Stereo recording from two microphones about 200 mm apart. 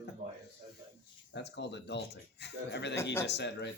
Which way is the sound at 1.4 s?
60° left (ahead or behind).